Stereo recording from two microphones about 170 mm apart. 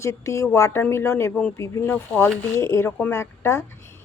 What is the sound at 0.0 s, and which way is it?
Speech, 15° left (ahead or behind).